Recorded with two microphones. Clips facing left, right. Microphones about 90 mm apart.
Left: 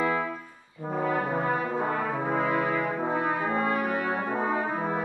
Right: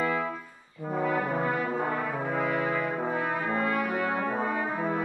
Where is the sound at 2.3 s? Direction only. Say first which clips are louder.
Left 2 dB; 35° left (ahead or behind).